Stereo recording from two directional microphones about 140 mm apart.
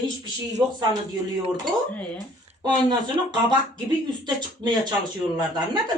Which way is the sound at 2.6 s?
30° right (ahead or behind).